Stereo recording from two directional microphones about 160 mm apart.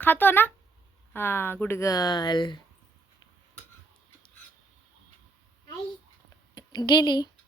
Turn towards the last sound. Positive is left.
turn(degrees=25)  # may be behind; listen again after turning